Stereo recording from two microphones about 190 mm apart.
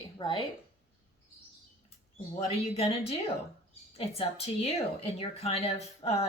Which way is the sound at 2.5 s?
30° left (ahead or behind).